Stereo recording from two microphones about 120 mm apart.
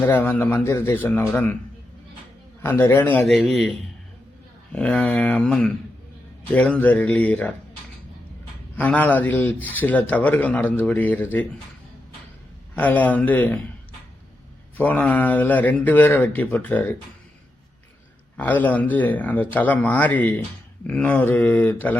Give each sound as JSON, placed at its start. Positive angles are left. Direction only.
{"t": 0.0, "sound": "speech", "side_deg": 20}
{"t": 2.6, "sound": "speech", "side_deg": 20}
{"t": 3.2, "sound": "speech", "side_deg": 0}
{"t": 8.7, "sound": "speech", "side_deg": 15}
{"t": 12.7, "sound": "speech", "side_deg": 15}
{"t": 14.8, "sound": "speech", "side_deg": 15}
{"t": 18.3, "sound": "speech", "side_deg": 15}